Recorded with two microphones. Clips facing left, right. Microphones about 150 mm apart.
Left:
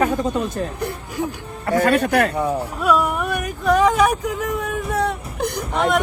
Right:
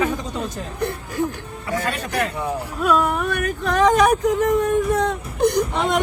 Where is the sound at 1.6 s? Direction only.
55° left (ahead or behind).